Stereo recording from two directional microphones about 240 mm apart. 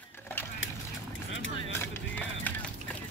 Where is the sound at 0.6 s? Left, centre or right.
Left.